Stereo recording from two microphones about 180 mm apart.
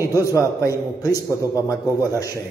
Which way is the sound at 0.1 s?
20° left (ahead or behind).